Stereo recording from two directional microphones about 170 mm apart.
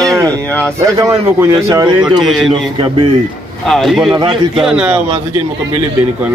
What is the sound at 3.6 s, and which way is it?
Speech, centre (ahead or behind).